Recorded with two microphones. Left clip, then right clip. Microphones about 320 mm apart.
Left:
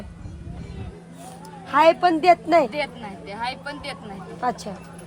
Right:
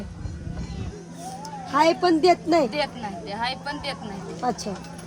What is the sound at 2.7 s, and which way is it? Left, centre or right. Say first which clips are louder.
Speech: right 1 dB; centre.